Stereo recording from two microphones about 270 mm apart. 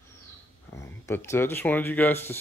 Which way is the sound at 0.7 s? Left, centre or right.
Centre.